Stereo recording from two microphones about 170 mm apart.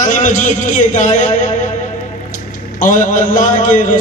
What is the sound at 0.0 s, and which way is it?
A man's voice, 50° left (ahead or behind).